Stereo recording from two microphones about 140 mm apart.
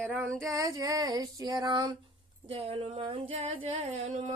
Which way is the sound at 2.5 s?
45° right (ahead or behind).